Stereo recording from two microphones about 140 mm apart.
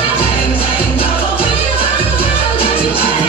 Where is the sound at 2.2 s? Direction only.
40° left (ahead or behind).